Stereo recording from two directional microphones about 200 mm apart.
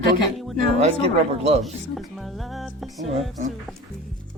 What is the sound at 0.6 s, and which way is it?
Speech, 30° right (ahead or behind).